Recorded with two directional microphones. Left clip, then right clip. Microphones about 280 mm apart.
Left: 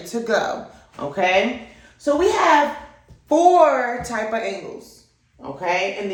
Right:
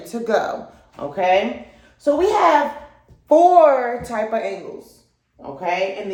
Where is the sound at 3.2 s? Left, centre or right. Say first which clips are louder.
Right 2 dB; right.